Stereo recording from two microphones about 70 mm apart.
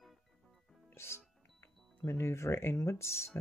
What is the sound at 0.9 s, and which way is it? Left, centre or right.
Music, left.